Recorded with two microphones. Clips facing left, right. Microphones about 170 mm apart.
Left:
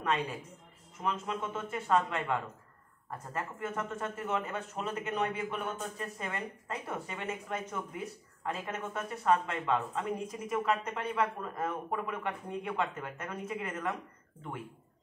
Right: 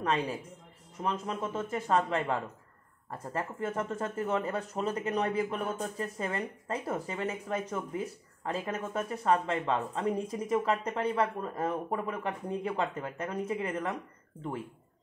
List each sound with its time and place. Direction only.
0.0 s speech: 35° right (ahead or behind)